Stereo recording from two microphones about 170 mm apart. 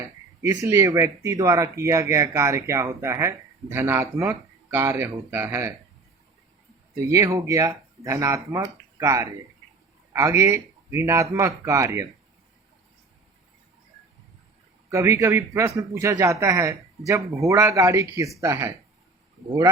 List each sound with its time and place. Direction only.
0.4 s speech: 15° right (ahead or behind)
6.9 s speech: 20° right (ahead or behind)
14.8 s speech: 15° right (ahead or behind)